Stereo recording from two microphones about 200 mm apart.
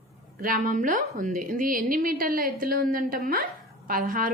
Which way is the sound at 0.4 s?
40° right (ahead or behind).